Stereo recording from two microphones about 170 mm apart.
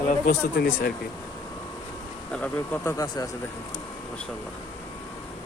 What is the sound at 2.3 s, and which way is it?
Speech, 10° left (ahead or behind).